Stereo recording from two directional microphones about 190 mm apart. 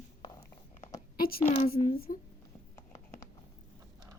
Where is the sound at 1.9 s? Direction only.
50° left (ahead or behind).